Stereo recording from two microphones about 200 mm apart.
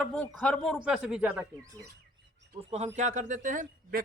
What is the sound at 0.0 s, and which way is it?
Speech, 5° left (ahead or behind).